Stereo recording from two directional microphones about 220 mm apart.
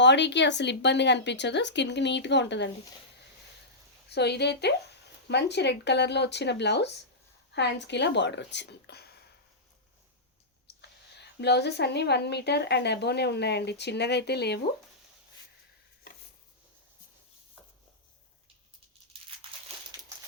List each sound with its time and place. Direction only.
0.0 s speech: 55° left (ahead or behind)
4.1 s speech: 50° left (ahead or behind)
10.7 s speech: 50° left (ahead or behind)
19.1 s crumpling: 25° right (ahead or behind)